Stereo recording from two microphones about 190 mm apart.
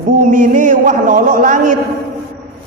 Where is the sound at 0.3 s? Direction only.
45° right (ahead or behind).